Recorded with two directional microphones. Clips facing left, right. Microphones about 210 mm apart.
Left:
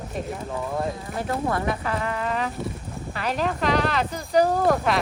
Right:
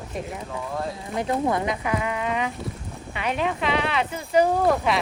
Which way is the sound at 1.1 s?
20° right (ahead or behind).